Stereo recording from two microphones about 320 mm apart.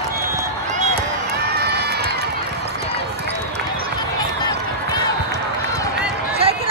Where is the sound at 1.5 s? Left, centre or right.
Right.